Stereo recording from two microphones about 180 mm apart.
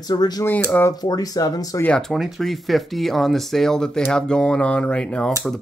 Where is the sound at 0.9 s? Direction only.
20° left (ahead or behind).